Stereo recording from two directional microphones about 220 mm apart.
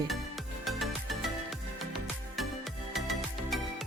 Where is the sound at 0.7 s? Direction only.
Centre (ahead or behind).